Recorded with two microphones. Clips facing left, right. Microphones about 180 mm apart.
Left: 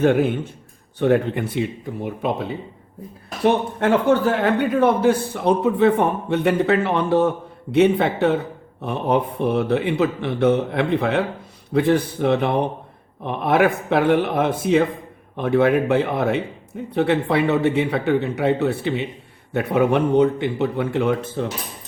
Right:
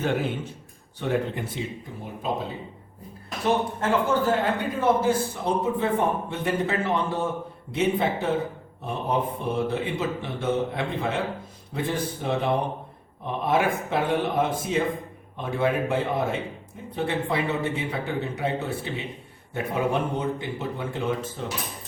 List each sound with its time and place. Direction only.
0.0 s a man's voice: 55° left (ahead or behind)